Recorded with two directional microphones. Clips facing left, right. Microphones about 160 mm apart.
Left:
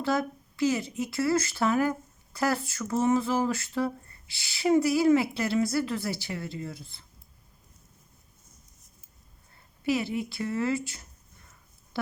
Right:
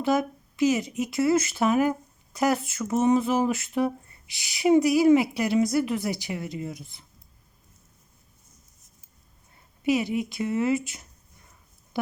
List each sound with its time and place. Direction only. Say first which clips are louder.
0.0 s speech: right 4 dB; 15° right (ahead or behind)
9.8 s speech: right 4 dB; 15° right (ahead or behind)